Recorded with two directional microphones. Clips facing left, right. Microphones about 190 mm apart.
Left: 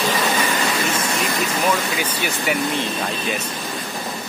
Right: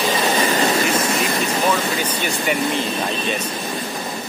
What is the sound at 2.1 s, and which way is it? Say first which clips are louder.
Speech: right 1 dB; centre (ahead or behind).